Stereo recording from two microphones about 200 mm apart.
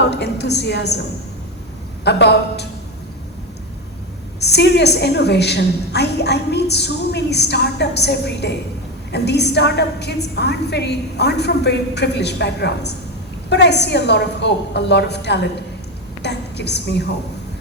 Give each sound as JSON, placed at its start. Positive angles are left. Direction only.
{"t": 0.0, "sound": "a woman's voice", "side_deg": 60}
{"t": 2.0, "sound": "a woman's voice", "side_deg": 55}
{"t": 4.4, "sound": "a woman's voice", "side_deg": 55}
{"t": 16.2, "sound": "a sound", "side_deg": 55}